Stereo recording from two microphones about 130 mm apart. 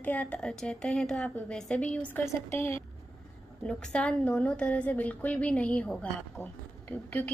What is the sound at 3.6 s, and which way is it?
A woman's voice, 5° left (ahead or behind).